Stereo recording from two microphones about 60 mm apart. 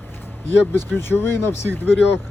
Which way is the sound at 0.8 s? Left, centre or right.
Left.